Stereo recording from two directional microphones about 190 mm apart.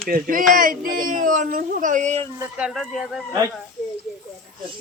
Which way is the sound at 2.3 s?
5° right (ahead or behind).